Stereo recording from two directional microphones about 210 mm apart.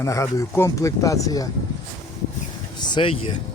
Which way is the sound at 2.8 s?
25° left (ahead or behind).